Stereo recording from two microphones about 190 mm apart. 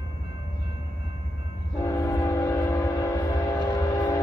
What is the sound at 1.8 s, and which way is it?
Train, 15° left (ahead or behind).